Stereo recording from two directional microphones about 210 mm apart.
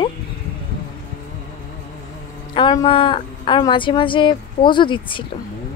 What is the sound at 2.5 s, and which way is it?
Speech, 25° left (ahead or behind).